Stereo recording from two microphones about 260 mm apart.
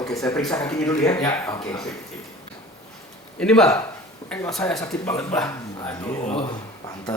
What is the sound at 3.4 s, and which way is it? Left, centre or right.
Speech, centre.